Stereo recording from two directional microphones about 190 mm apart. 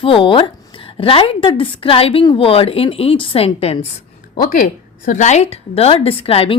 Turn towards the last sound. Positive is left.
turn(degrees=30)  # may be behind; listen again after turning